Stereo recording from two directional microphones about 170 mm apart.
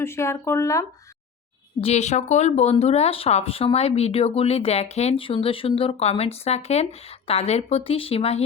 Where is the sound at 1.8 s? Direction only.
40° left (ahead or behind).